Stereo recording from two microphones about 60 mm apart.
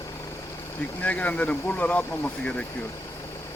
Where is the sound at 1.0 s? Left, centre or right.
Left.